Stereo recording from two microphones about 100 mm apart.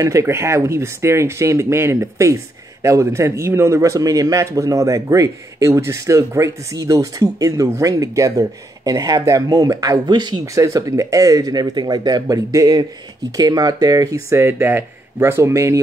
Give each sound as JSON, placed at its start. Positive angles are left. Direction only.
{"t": 0.0, "sound": "speech", "side_deg": -30}
{"t": 10.4, "sound": "speech", "side_deg": -35}